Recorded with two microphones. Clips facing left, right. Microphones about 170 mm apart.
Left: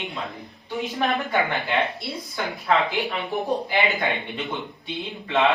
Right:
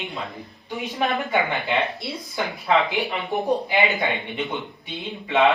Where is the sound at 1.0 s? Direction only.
15° right (ahead or behind).